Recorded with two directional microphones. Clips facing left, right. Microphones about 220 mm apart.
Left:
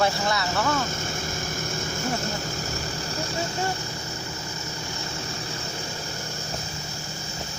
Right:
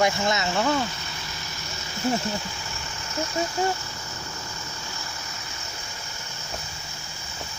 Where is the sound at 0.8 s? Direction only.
50° left (ahead or behind).